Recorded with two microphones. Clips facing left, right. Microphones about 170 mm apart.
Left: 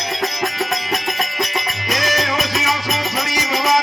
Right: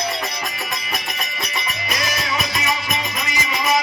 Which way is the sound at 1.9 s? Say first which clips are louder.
Left 6 dB; 90° left.